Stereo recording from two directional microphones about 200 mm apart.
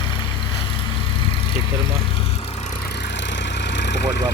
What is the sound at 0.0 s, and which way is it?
Vehicle, 25° left (ahead or behind).